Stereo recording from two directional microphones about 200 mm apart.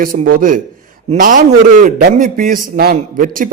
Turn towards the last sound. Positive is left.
turn(degrees=-45)  # may be behind; listen again after turning